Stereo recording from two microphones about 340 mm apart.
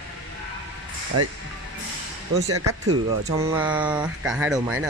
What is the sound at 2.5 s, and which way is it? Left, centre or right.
Speech, right.